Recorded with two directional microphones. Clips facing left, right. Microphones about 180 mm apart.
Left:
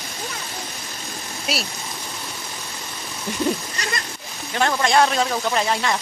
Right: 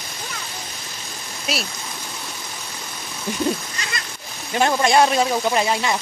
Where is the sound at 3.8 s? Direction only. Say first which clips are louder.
Left 3 dB; 40° left (ahead or behind).